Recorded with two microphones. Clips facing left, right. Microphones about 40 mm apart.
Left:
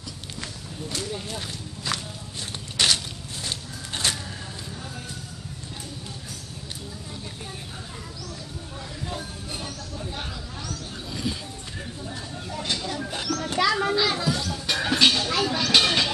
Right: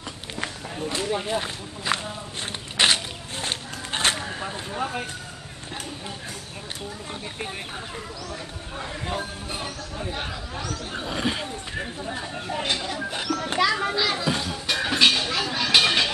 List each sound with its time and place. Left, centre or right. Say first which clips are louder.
0.4 s speech: right 7 dB; right
2.8 s a sound: right 3 dB; right
4.7 s speech: right 10 dB; right
8.7 s speech: right 5 dB; right
10.9 s speech: right 5 dB; right; by 14.2 s centre
14.2 s speech: right 1 dB; right
14.7 s speech: right 1 dB; centre